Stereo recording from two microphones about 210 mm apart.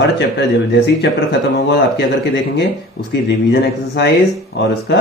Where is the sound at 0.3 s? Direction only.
55° left (ahead or behind).